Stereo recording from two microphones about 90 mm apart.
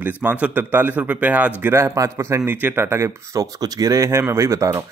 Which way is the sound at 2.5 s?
25° right (ahead or behind).